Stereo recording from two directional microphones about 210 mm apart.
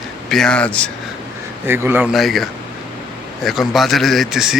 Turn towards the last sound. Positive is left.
turn(degrees=0)  # may be behind; listen again after turning